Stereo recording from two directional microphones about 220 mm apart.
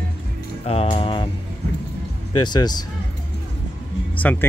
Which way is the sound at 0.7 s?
25° left (ahead or behind).